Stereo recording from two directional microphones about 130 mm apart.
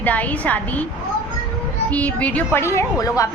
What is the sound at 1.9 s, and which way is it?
A woman's voice, 10° left (ahead or behind).